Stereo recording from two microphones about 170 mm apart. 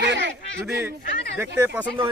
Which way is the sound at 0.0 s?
90° right.